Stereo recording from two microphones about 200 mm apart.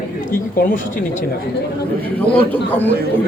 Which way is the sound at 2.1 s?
10° left (ahead or behind).